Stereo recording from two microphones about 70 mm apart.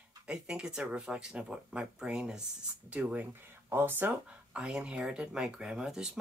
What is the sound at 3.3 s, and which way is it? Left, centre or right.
Speech, right.